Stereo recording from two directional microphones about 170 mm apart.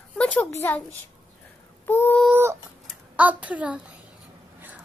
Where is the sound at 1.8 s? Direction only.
10° left (ahead or behind).